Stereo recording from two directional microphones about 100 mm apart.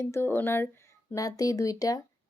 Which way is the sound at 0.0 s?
25° left (ahead or behind).